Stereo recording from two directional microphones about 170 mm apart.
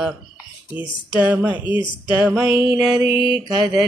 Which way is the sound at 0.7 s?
10° right (ahead or behind).